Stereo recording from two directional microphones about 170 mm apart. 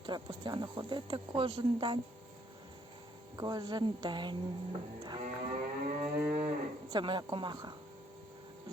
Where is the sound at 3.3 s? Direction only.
25° right (ahead or behind).